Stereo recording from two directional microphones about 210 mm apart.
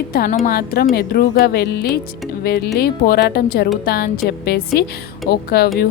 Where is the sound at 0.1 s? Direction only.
45° left (ahead or behind).